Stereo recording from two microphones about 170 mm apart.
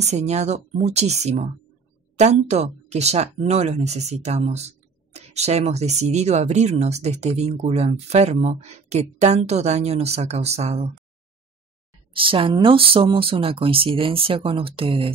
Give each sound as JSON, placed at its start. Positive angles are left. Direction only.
{"t": 0.0, "sound": "speech", "side_deg": -40}
{"t": 12.1, "sound": "speech", "side_deg": -30}